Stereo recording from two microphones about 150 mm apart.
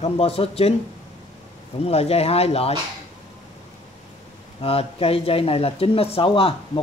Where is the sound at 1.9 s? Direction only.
45° left (ahead or behind).